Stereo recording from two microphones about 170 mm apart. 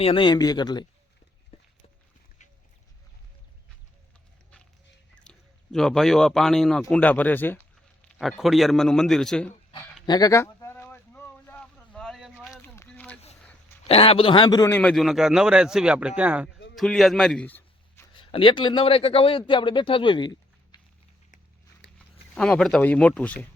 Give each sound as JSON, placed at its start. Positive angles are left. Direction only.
{"t": 0.0, "sound": "speech", "side_deg": 30}
{"t": 1.5, "sound": "a sound", "side_deg": 35}
{"t": 5.2, "sound": "speech", "side_deg": 5}
{"t": 8.2, "sound": "a man's voice", "side_deg": 0}
{"t": 10.1, "sound": "a sound", "side_deg": 20}
{"t": 12.6, "sound": "a sound", "side_deg": 15}
{"t": 13.8, "sound": "a man's voice", "side_deg": 35}
{"t": 14.8, "sound": "a man's voice", "side_deg": 5}
{"t": 16.5, "sound": "a sound", "side_deg": 90}
{"t": 16.7, "sound": "a man's voice", "side_deg": 0}
{"t": 18.2, "sound": "speech", "side_deg": 30}
{"t": 21.9, "sound": "speech", "side_deg": 5}